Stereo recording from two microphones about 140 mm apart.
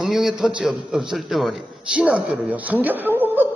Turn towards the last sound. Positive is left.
turn(degrees=-15)  # may be behind; listen again after turning